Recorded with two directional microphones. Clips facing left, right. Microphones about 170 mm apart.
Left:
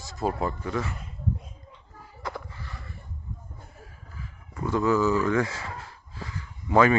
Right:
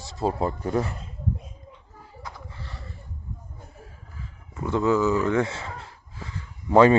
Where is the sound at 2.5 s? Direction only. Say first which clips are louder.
Right 1 dB; 30° right (ahead or behind).